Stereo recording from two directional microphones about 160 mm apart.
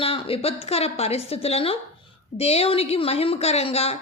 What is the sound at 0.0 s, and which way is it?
A woman's voice, 35° left (ahead or behind).